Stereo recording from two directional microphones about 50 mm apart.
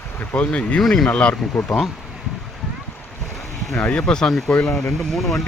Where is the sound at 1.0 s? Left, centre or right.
Left.